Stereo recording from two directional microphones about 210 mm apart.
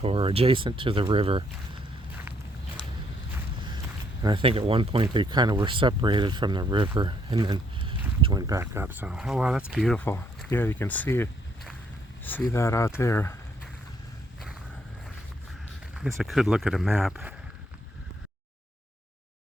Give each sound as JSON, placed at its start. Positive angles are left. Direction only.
{"t": 0.0, "sound": "speech", "side_deg": -25}
{"t": 4.2, "sound": "speech", "side_deg": -25}
{"t": 16.0, "sound": "speech", "side_deg": 0}